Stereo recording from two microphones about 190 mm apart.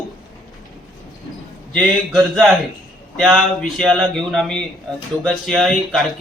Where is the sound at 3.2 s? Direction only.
Centre (ahead or behind).